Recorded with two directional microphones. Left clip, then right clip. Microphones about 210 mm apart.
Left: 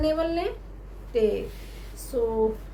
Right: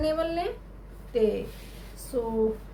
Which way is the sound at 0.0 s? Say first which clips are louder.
Left 2 dB; 10° left (ahead or behind).